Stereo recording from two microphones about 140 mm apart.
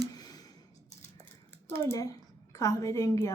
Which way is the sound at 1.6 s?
15° left (ahead or behind).